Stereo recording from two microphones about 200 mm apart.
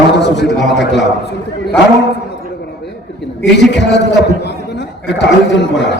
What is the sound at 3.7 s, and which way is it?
Speech, 60° left (ahead or behind).